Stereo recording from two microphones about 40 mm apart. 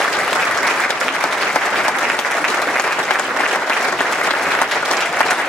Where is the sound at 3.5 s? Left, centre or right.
Left.